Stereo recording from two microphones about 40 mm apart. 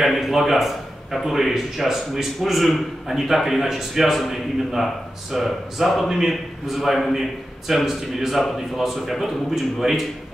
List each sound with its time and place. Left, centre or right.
0.0 s a man's voice: centre